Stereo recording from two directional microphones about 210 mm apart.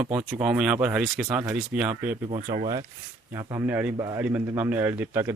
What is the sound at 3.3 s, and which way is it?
Speech, 15° right (ahead or behind).